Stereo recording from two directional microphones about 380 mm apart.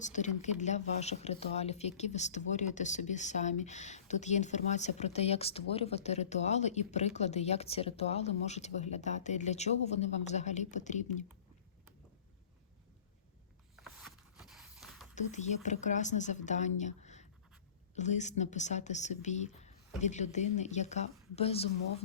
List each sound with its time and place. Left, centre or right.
0.0 s speech: centre
13.7 s a sound: centre
15.1 s a woman's voice: centre